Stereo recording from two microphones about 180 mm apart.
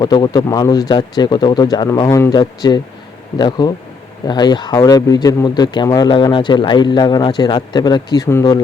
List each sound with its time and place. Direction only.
0.0 s speech: 25° left (ahead or behind)